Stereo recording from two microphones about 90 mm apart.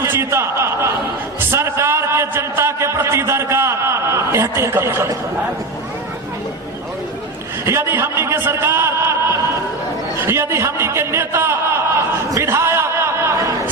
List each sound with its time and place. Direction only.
0.0 s a man's voice: 30° right (ahead or behind)
7.6 s a man's voice: 30° right (ahead or behind)
10.2 s a sound: 30° right (ahead or behind)